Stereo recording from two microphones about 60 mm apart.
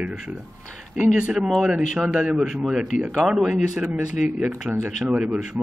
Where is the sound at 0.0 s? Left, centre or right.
Centre.